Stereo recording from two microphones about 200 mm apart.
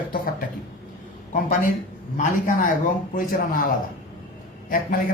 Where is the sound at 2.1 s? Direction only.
40° left (ahead or behind).